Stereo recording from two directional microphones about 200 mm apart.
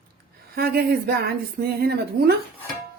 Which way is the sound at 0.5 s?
50° right (ahead or behind).